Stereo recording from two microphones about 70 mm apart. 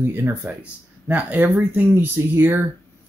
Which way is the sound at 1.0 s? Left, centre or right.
Right.